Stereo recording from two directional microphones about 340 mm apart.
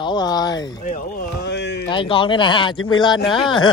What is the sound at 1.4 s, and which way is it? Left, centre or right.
Speech, left.